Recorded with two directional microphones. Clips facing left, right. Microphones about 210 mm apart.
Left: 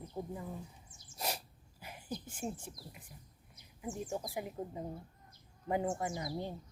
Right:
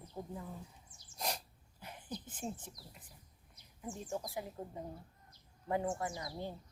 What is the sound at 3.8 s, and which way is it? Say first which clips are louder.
Speech: left 2 dB; 15° left (ahead or behind).